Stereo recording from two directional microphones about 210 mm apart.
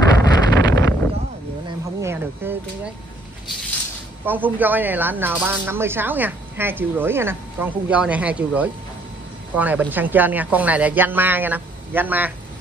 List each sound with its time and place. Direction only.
0.0 s wind noise: 20° left (ahead or behind)
2.0 s a sound: 10° right (ahead or behind)
4.3 s speech: 10° right (ahead or behind)